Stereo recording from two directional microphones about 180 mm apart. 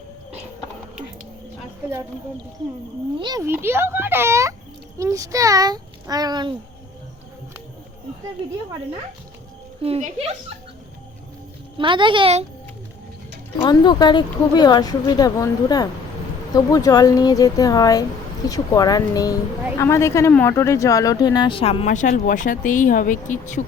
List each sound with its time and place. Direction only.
3.2 s a child's voice: 25° right (ahead or behind)
3.4 s a child's voice: 10° right (ahead or behind)
9.8 s speech: 35° right (ahead or behind)
11.8 s a child's voice: 25° right (ahead or behind)
13.6 s speech: 25° left (ahead or behind); by 23.6 s 45° left (ahead or behind)